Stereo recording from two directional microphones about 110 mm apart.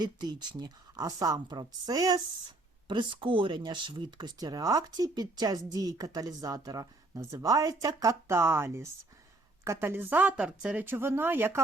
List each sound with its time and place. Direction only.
0.0 s a woman's voice: 40° right (ahead or behind); by 11.6 s 20° right (ahead or behind)